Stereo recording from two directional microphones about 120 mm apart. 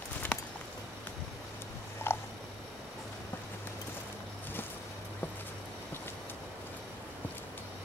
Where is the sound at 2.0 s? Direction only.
20° left (ahead or behind).